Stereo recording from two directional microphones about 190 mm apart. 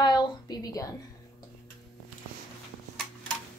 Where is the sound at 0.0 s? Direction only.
20° left (ahead or behind).